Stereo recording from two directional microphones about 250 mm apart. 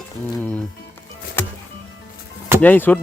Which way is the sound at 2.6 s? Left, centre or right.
Centre.